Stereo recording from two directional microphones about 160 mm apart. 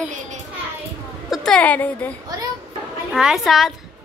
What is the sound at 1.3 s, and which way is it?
Speech, 5° left (ahead or behind).